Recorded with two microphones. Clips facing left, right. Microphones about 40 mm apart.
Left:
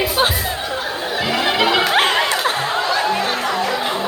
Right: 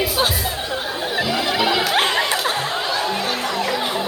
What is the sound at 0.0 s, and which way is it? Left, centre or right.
Music, left.